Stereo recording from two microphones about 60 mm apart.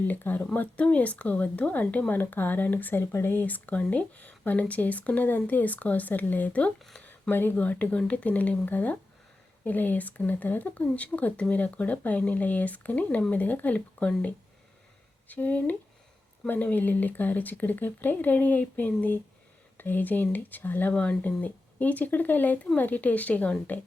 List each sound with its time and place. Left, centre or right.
0.1 s speech: left
3.0 s speech: left
6.9 s a sound: left
7.6 s speech: left
15.3 s speech: left
20.9 s speech: left